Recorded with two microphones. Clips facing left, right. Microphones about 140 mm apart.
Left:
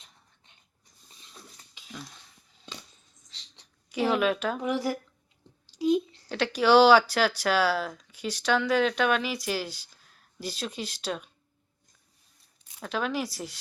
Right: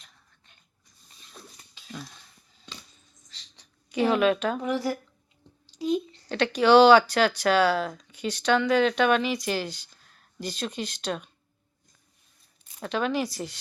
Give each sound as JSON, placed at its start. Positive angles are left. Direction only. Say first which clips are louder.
{"t": 0.0, "sound": "dog", "louder": "even", "side_deg": 20}
{"t": 3.2, "sound": "a sound", "louder": "left 1 dB", "side_deg": 25}
{"t": 3.8, "sound": "speech", "louder": "right 3 dB", "side_deg": 5}
{"t": 12.8, "sound": "speech", "louder": "right 3 dB", "side_deg": 0}